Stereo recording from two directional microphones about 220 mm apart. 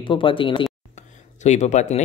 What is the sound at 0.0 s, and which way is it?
Speech, 20° left (ahead or behind).